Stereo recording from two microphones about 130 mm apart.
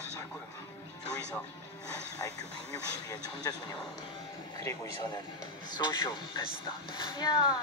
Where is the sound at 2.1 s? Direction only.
30° left (ahead or behind).